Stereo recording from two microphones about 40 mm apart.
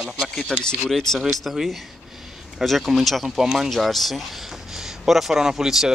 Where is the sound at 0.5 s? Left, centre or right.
Centre.